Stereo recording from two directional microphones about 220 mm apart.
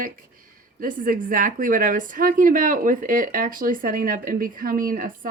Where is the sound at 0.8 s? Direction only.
40° right (ahead or behind).